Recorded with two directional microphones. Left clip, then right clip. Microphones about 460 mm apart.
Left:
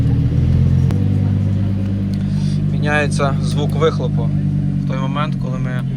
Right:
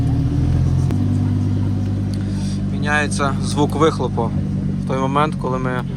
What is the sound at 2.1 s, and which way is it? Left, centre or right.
Speech, centre.